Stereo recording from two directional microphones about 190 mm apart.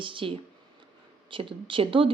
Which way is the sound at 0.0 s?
25° right (ahead or behind).